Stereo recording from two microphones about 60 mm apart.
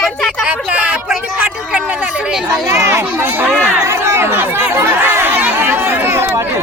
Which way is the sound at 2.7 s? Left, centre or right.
Right.